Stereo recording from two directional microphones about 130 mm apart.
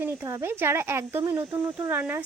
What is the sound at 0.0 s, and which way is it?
Speech, 20° right (ahead or behind).